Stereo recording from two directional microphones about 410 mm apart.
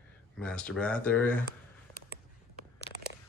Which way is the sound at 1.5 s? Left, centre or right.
Left.